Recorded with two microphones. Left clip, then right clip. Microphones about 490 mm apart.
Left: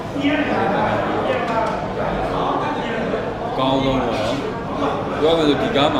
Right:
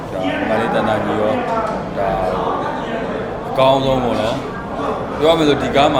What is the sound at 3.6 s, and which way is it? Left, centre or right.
Speech, right.